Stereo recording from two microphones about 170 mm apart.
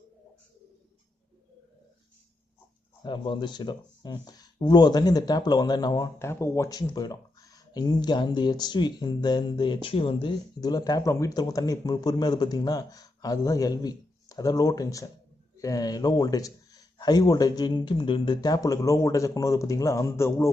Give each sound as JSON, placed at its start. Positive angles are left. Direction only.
{"t": 3.0, "sound": "speech", "side_deg": 25}